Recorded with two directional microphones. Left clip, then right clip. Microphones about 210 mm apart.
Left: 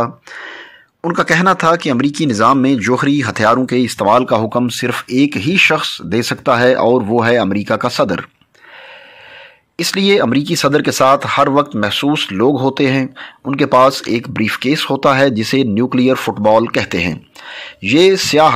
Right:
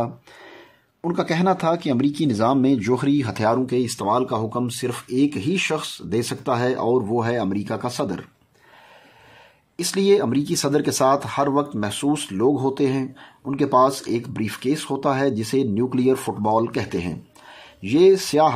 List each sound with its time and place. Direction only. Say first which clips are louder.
0.0 s speech: left 9 dB; centre (ahead or behind)
3.5 s speech: left 7 dB; 15° left (ahead or behind)
9.8 s speech: left 6 dB; 15° left (ahead or behind)